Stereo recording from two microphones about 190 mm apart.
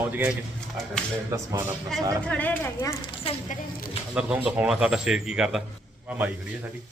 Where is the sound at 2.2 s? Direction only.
10° left (ahead or behind).